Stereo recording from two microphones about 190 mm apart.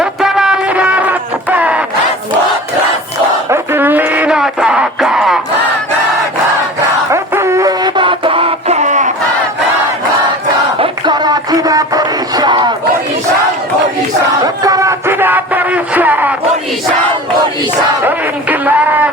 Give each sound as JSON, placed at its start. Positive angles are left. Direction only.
{"t": 0.0, "sound": "music", "side_deg": 0}
{"t": 3.5, "sound": "music", "side_deg": -10}
{"t": 7.1, "sound": "music", "side_deg": -15}
{"t": 10.8, "sound": "music", "side_deg": -25}
{"t": 14.4, "sound": "a sound", "side_deg": -20}
{"t": 18.0, "sound": "a sound", "side_deg": -10}